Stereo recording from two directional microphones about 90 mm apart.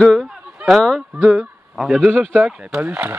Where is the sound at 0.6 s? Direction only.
5° right (ahead or behind).